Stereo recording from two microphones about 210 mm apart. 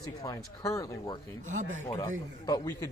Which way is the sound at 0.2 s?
15° left (ahead or behind).